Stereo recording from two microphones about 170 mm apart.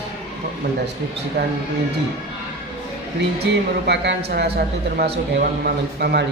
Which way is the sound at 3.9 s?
80° right.